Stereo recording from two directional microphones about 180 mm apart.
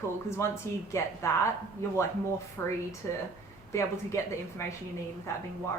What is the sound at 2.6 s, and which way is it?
Speech, 15° left (ahead or behind).